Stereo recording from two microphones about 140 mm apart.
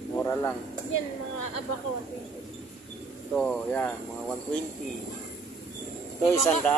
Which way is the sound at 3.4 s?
5° left (ahead or behind).